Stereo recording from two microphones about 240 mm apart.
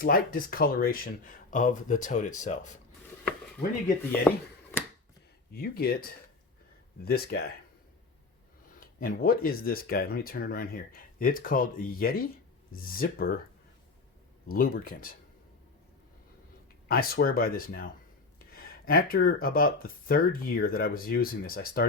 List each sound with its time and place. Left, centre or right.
0.0 s speech: left
4.3 s speech: centre
5.5 s speech: left
8.8 s speech: left
14.4 s speech: left
16.9 s speech: left